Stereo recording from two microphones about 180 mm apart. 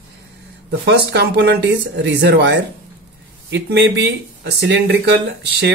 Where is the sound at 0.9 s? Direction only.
70° right (ahead or behind).